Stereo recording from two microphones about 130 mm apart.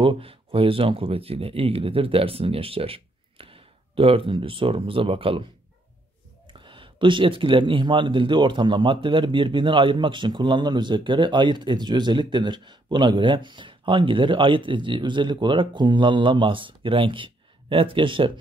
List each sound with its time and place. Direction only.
0.0 s speech: 45° right (ahead or behind)
6.4 s speech: 40° right (ahead or behind)